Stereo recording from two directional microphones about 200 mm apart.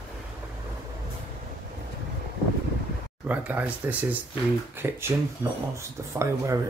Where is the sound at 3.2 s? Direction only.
10° right (ahead or behind).